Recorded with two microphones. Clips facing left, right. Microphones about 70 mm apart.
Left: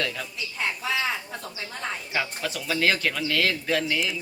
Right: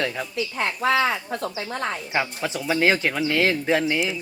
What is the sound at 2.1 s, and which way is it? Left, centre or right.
Speech, right.